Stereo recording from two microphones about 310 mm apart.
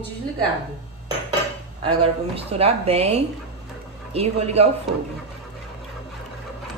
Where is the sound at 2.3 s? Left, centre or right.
Centre.